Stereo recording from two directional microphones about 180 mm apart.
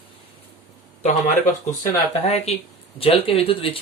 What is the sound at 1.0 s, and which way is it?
Speech, 45° left (ahead or behind).